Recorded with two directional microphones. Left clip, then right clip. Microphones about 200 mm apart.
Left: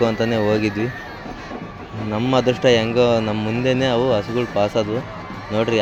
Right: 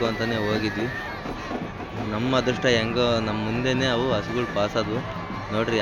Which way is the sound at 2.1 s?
30° left (ahead or behind).